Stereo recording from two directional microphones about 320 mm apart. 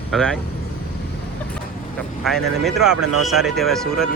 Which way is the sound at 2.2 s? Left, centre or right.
Centre.